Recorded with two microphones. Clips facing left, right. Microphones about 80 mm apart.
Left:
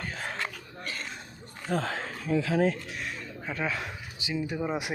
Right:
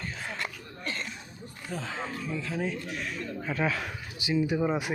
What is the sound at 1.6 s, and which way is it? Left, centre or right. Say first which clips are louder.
Speech: left 5 dB; left.